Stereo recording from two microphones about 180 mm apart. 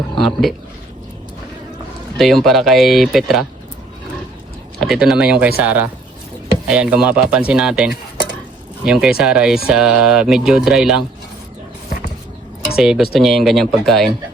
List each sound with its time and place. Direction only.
2.1 s speech: centre (ahead or behind)
4.8 s speech: centre (ahead or behind)
12.7 s speech: 5° right (ahead or behind)